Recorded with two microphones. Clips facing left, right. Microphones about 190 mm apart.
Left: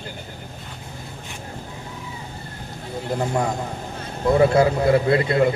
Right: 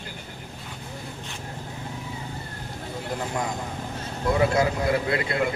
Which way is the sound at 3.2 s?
45° left (ahead or behind).